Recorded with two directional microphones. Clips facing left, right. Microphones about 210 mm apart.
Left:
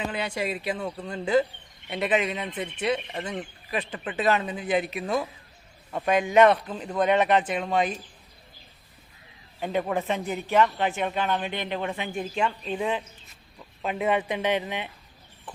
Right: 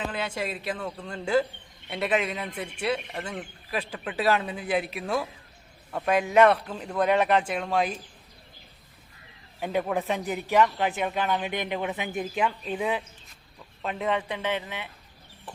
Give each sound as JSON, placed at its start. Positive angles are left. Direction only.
{"t": 0.0, "sound": "a man's voice", "side_deg": 0}
{"t": 2.7, "sound": "speech", "side_deg": -5}
{"t": 3.1, "sound": "a man's voice", "side_deg": 5}
{"t": 9.6, "sound": "a man's voice", "side_deg": -5}
{"t": 13.8, "sound": "speech", "side_deg": 10}